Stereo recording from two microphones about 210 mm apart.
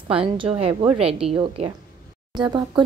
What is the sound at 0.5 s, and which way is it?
Speech, 30° right (ahead or behind).